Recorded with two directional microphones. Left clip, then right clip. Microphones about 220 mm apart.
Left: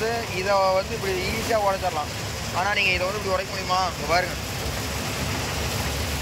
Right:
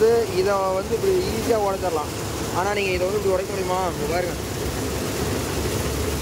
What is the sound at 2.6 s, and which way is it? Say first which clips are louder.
Speech: left 3 dB; 10° right (ahead or behind).